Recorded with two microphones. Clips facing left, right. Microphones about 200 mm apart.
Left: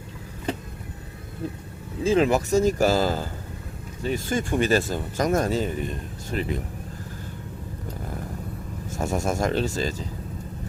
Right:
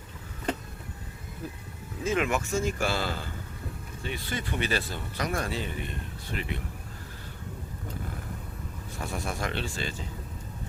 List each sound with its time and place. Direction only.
2.0 s speech: 35° left (ahead or behind)
8.9 s speech: 45° left (ahead or behind)